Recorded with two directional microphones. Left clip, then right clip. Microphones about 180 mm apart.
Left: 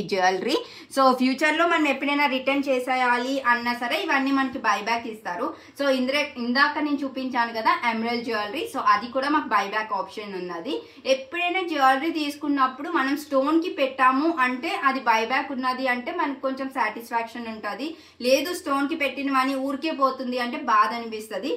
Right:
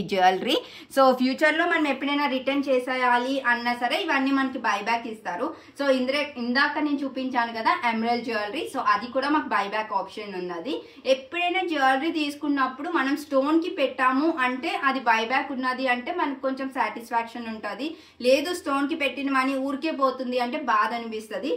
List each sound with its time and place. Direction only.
0.1 s a woman's voice: 35° right (ahead or behind)
0.9 s speech: 20° right (ahead or behind)
1.7 s a woman's voice: 5° right (ahead or behind)